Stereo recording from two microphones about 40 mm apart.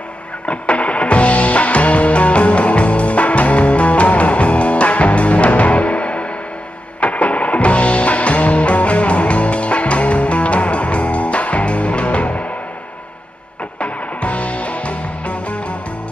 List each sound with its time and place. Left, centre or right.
0.5 s music: left
13.7 s music: left